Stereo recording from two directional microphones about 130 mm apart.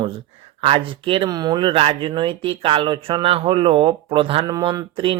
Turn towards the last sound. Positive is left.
turn(degrees=-40)  # may be behind; listen again after turning